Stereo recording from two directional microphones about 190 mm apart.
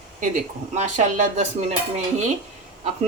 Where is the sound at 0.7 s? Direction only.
40° right (ahead or behind).